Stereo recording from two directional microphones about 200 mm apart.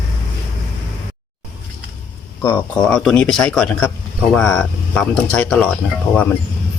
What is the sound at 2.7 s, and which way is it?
Speech, 5° left (ahead or behind).